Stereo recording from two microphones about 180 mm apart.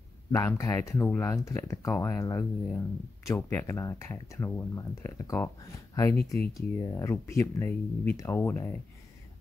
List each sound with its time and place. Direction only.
0.3 s speech: 15° left (ahead or behind)